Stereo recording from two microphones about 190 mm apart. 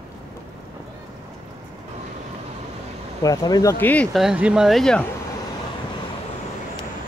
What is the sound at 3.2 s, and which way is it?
Speech, 20° left (ahead or behind).